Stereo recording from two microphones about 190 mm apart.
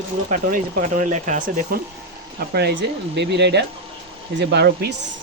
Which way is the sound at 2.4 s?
55° right (ahead or behind).